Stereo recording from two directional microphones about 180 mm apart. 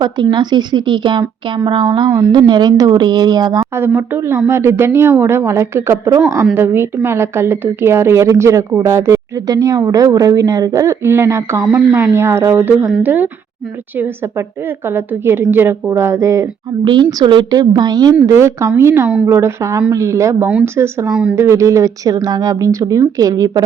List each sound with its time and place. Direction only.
0.0 s speech: 25° right (ahead or behind)
3.8 s a woman's voice: 10° right (ahead or behind)
21.3 s speech: 15° right (ahead or behind)